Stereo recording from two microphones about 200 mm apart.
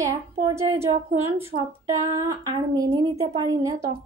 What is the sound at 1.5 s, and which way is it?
Female singing, 50° right (ahead or behind).